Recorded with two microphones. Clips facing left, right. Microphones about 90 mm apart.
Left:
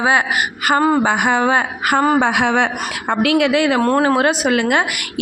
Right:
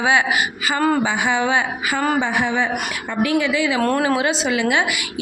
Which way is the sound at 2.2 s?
75° left (ahead or behind).